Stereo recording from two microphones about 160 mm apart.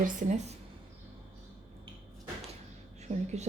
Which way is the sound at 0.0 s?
50° right (ahead or behind).